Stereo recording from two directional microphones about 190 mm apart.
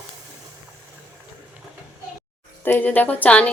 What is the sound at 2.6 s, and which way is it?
Speech, 10° left (ahead or behind).